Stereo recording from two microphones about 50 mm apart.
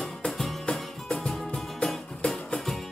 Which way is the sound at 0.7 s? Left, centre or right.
Centre.